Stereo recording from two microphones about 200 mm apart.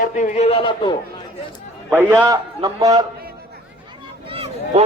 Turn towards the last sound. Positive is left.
turn(degrees=-30)  # may be behind; listen again after turning